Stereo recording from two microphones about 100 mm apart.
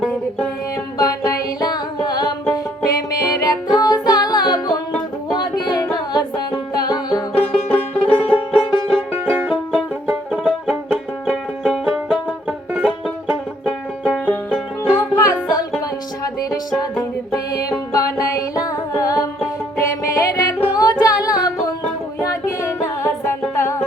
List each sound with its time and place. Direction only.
0.1 s music: 15° left (ahead or behind)
0.9 s music: 35° left (ahead or behind)
7.7 s music: 10° left (ahead or behind)
8.1 s music: 70° left (ahead or behind)
9.1 s music: 15° right (ahead or behind)
15.1 s music: 35° left (ahead or behind)